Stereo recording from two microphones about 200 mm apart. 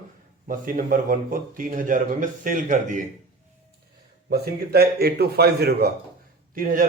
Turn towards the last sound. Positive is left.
turn(degrees=-45)  # may be behind; listen again after turning